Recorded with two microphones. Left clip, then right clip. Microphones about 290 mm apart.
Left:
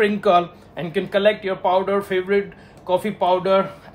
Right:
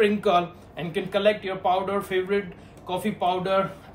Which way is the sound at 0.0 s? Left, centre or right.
Left.